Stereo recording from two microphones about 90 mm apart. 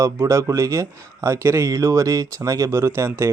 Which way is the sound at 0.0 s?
35° right (ahead or behind).